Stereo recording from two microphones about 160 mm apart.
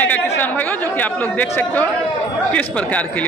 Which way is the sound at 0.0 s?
10° left (ahead or behind).